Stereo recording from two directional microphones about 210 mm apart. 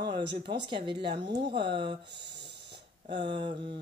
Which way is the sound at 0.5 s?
20° right (ahead or behind).